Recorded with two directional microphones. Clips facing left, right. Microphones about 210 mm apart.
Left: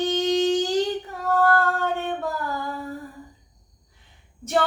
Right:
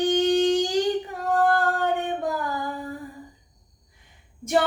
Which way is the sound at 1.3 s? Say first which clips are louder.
Left 1 dB; 15° right (ahead or behind).